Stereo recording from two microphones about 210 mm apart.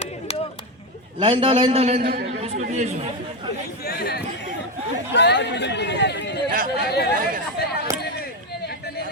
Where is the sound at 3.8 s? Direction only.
50° left (ahead or behind).